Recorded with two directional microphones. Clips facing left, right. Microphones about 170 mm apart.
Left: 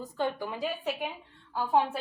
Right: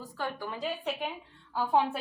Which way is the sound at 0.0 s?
20° left (ahead or behind).